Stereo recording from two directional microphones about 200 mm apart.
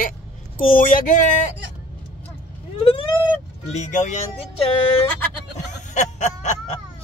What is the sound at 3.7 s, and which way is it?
Speech, 35° left (ahead or behind).